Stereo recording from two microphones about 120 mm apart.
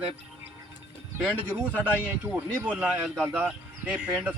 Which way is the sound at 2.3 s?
15° right (ahead or behind).